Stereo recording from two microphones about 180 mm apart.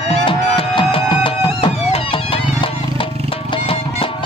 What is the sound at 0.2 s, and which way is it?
Music, 30° left (ahead or behind).